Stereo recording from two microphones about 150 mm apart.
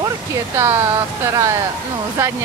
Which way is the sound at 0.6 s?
15° right (ahead or behind).